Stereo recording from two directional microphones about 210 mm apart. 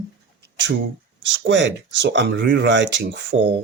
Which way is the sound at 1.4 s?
60° right (ahead or behind).